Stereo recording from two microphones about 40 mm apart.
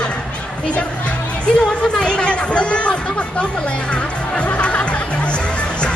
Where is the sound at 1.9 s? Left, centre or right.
Left.